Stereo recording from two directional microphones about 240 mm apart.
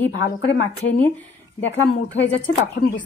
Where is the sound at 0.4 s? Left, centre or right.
Left.